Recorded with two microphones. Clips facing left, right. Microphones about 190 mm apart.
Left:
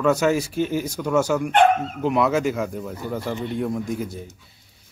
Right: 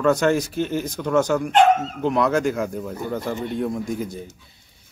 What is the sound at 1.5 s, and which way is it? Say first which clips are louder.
Speech: right 1 dB; 55° left (ahead or behind).